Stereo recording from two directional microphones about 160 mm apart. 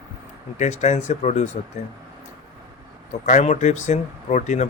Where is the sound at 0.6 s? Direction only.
45° left (ahead or behind).